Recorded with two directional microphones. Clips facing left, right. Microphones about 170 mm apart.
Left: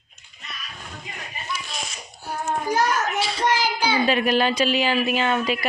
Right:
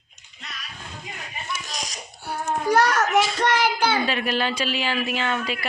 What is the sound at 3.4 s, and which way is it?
Child singing, 65° right (ahead or behind).